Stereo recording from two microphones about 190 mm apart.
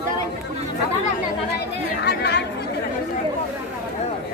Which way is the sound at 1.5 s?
60° left (ahead or behind).